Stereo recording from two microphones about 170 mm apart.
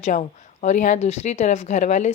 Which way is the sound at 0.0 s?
45° left (ahead or behind).